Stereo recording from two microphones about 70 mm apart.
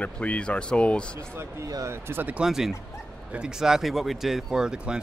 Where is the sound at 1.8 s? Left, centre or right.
Right.